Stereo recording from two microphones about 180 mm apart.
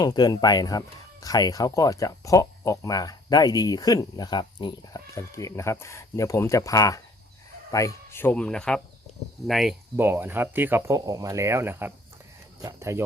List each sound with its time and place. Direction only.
0.0 s speech: 25° left (ahead or behind); by 9.7 s centre (ahead or behind)
10.0 s speech: 10° right (ahead or behind)